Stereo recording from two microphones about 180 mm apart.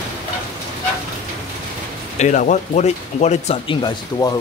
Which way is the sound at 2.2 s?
40° left (ahead or behind).